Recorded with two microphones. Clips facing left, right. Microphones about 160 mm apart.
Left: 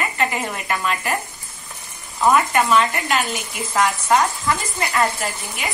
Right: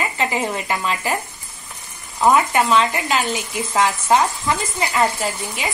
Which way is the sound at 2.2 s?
20° right (ahead or behind).